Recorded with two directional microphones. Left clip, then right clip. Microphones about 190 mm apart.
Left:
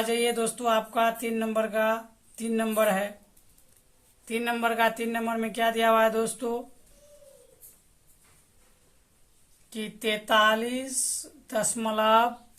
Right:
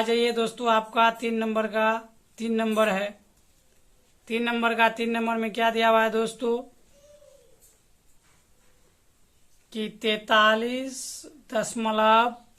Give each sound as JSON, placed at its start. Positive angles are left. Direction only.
{"t": 0.0, "sound": "speech", "side_deg": -40}
{"t": 4.3, "sound": "speech", "side_deg": -35}
{"t": 9.6, "sound": "speech", "side_deg": -35}